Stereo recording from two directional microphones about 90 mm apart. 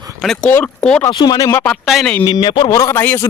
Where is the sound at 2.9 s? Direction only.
25° left (ahead or behind).